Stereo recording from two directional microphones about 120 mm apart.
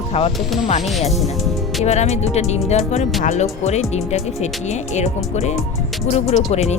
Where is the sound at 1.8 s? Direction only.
65° left (ahead or behind).